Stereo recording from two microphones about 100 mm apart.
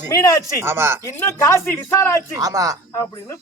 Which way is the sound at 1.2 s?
30° left (ahead or behind).